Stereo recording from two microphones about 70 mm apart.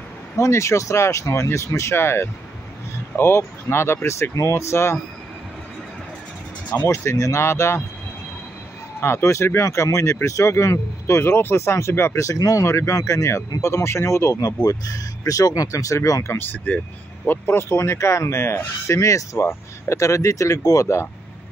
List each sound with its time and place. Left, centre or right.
0.4 s speech: left
6.9 s speech: left
9.0 s speech: left
12.2 s speech: left
16.3 s speech: left